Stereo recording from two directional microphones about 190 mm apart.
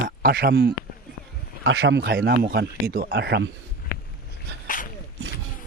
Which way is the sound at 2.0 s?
55° right (ahead or behind).